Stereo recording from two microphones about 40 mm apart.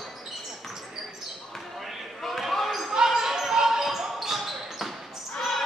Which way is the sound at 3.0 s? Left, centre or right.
Centre.